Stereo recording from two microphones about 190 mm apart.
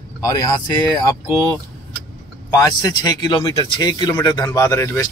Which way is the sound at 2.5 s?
20° left (ahead or behind).